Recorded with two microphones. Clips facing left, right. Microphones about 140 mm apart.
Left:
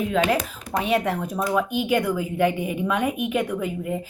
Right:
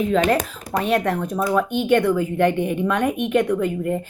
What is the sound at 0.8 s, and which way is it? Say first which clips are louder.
A woman's voice: right 2 dB; 5° left (ahead or behind).